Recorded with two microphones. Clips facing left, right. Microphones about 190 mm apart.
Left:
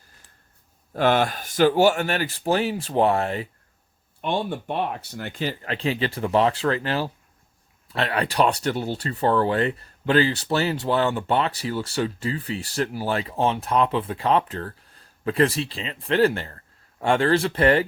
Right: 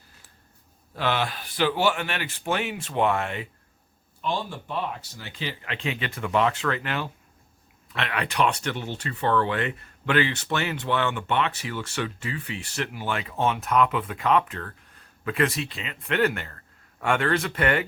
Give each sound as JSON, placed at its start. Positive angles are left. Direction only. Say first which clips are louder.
{"t": 0.9, "sound": "speech", "louder": "left 6 dB", "side_deg": 45}
{"t": 4.2, "sound": "speech", "louder": "left 4 dB", "side_deg": 60}